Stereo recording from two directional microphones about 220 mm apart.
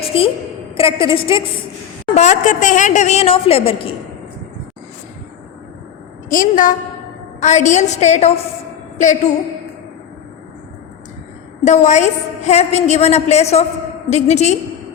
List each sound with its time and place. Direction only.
0.1 s a woman's voice: 25° left (ahead or behind)
6.2 s a woman's voice: 40° left (ahead or behind)
11.6 s a woman's voice: 30° left (ahead or behind)